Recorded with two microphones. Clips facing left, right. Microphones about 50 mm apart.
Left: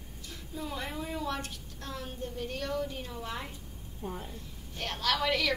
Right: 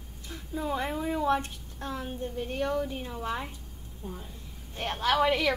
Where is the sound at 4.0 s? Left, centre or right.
Left.